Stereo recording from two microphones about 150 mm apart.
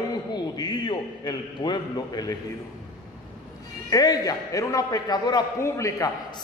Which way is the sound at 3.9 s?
25° left (ahead or behind).